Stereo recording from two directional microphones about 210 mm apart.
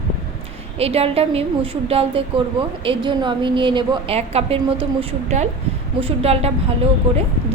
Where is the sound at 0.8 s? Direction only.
30° right (ahead or behind).